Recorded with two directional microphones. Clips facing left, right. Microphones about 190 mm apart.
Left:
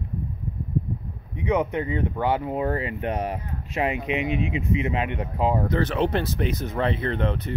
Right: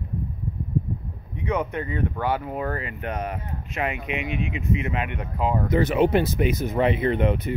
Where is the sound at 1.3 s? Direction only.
20° left (ahead or behind).